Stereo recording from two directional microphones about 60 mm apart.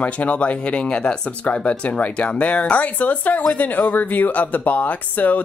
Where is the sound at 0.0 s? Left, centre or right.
Left.